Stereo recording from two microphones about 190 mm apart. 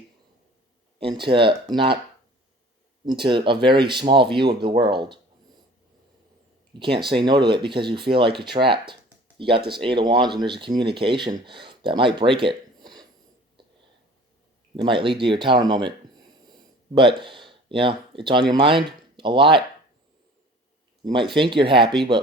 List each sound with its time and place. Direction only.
0.9 s speech: 25° right (ahead or behind)
3.1 s speech: 25° right (ahead or behind)
6.7 s speech: 25° right (ahead or behind)
14.8 s speech: 25° right (ahead or behind)
21.0 s speech: 25° right (ahead or behind)